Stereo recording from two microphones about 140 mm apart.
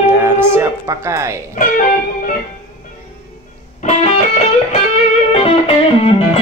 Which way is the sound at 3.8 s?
45° left (ahead or behind).